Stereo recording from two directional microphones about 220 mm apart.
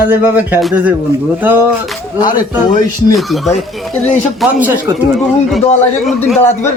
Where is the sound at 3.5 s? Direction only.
30° left (ahead or behind).